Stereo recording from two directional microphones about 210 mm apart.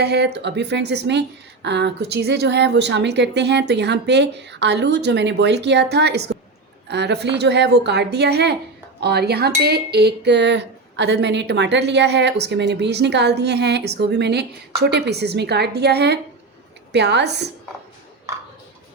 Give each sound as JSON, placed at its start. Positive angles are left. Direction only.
{"t": 0.0, "sound": "a woman's voice", "side_deg": -50}